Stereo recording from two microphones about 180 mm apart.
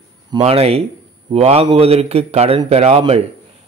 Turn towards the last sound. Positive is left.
turn(degrees=-35)  # may be behind; listen again after turning